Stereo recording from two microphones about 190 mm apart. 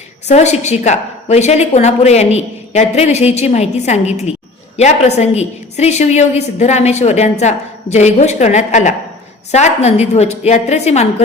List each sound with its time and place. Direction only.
0.3 s a woman's voice: 35° left (ahead or behind)